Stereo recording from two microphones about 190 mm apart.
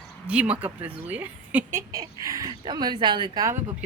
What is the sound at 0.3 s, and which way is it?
A woman's voice, 5° right (ahead or behind).